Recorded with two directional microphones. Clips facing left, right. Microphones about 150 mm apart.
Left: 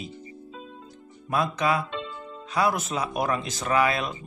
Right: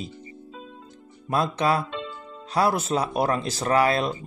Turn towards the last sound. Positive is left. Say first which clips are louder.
# right 3 dB
turn(degrees=-35)  # may be behind; listen again after turning